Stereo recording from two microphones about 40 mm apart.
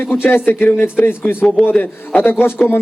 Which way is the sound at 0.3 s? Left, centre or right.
Left.